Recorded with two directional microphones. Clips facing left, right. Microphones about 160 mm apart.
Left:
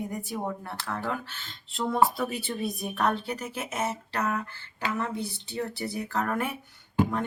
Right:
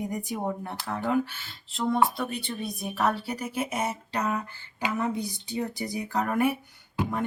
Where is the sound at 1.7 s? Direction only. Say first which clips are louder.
Even; centre (ahead or behind).